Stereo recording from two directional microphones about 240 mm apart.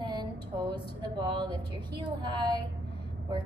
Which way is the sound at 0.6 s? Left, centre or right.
Centre.